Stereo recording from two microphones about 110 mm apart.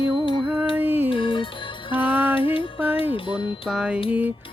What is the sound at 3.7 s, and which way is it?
Music, 10° right (ahead or behind).